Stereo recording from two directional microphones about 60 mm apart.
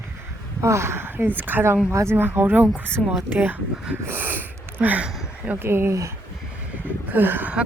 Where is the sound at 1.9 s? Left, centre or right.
Right.